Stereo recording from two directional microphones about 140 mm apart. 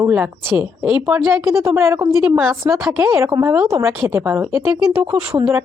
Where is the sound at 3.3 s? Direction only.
25° right (ahead or behind).